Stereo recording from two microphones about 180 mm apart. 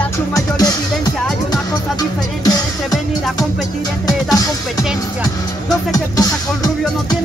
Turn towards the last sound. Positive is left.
turn(degrees=20)  # may be behind; listen again after turning